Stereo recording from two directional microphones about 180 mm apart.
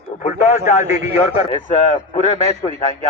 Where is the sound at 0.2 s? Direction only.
40° left (ahead or behind).